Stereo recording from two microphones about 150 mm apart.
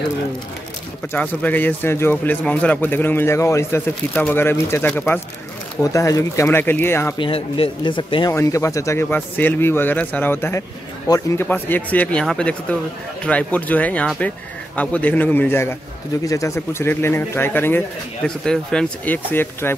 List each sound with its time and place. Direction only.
1.1 s speech: 10° left (ahead or behind)
7.2 s speech: 35° left (ahead or behind)
8.3 s a man's voice: 20° left (ahead or behind)
11.4 s speech: 10° left (ahead or behind)